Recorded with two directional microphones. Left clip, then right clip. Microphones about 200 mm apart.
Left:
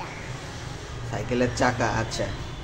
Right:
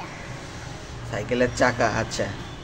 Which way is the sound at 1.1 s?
5° right (ahead or behind).